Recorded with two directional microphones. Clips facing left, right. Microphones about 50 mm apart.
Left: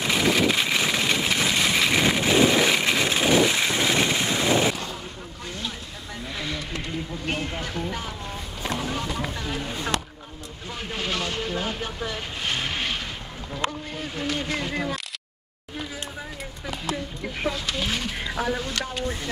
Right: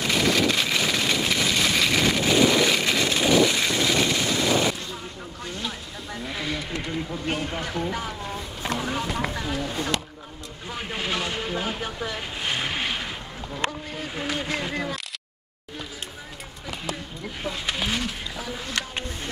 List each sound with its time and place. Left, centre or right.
0.0 s vehicle: centre
6.3 s vehicle: centre
7.2 s speech: centre
10.7 s speech: centre
17.8 s speech: centre